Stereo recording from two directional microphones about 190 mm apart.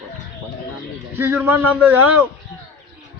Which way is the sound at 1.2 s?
10° right (ahead or behind).